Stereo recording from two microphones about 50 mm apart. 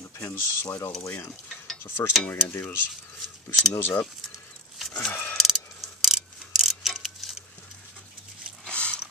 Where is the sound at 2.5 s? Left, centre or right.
Left.